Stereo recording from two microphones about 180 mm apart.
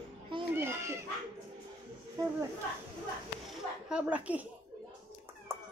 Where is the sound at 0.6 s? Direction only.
15° right (ahead or behind).